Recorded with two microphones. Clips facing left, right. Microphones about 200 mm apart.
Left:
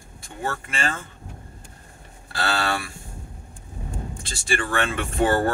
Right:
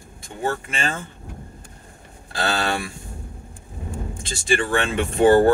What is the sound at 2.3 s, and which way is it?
Speech, 20° right (ahead or behind).